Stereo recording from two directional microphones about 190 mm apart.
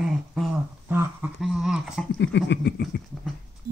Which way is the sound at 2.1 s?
65° left (ahead or behind).